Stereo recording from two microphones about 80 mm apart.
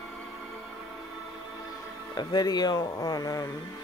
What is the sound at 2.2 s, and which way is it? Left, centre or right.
Speech, left.